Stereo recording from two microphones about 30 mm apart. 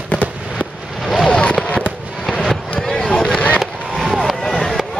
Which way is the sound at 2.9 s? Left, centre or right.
Left.